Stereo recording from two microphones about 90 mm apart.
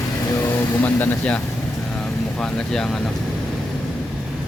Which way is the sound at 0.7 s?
20° left (ahead or behind).